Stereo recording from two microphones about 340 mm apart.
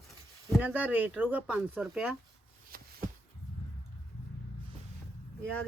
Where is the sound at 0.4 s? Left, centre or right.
Centre.